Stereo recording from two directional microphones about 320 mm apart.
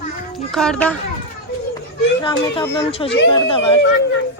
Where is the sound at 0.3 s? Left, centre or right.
Centre.